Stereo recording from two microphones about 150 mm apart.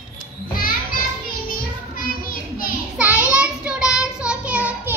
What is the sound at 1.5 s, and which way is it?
Child singing, 75° left (ahead or behind).